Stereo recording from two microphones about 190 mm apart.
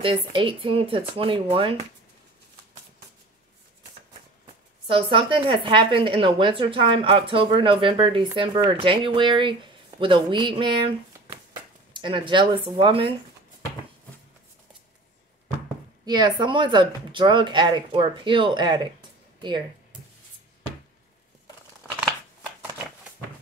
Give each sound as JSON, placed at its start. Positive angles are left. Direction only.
{"t": 0.0, "sound": "speech", "side_deg": -25}
{"t": 5.1, "sound": "speech", "side_deg": -25}
{"t": 16.1, "sound": "speech", "side_deg": -20}